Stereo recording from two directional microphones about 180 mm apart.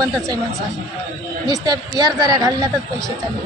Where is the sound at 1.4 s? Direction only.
20° right (ahead or behind).